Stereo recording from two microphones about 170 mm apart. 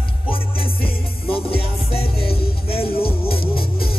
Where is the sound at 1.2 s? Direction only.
35° left (ahead or behind).